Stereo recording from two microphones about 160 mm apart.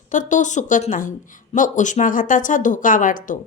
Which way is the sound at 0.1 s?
50° left (ahead or behind).